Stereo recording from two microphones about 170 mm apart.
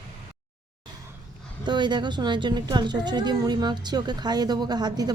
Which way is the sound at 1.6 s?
25° right (ahead or behind).